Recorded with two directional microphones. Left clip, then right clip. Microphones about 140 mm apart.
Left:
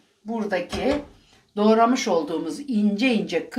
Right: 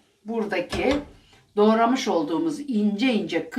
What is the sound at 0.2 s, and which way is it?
Speech, 40° left (ahead or behind).